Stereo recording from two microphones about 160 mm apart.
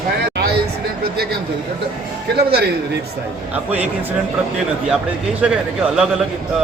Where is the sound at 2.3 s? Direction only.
90° right.